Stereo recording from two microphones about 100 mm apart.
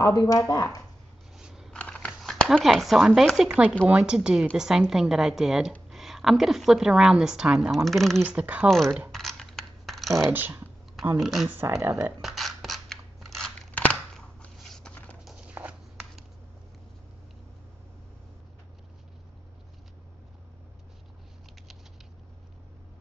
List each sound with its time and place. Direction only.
0.0 s speech: 40° left (ahead or behind)
1.3 s a sound: 5° right (ahead or behind)
1.7 s a sound: 10° left (ahead or behind)
3.3 s a woman's voice: 10° right (ahead or behind)
8.2 s speech: 15° right (ahead or behind)
8.6 s a woman's voice: 5° left (ahead or behind)
9.1 s coin: 5° left (ahead or behind)
10.3 s speech: 20° right (ahead or behind)
11.1 s a woman's voice: centre (ahead or behind)
11.4 s speech: 25° right (ahead or behind)
12.2 s scissors: centre (ahead or behind)
14.1 s a sound: 5° left (ahead or behind)
15.2 s a sound: 10° right (ahead or behind)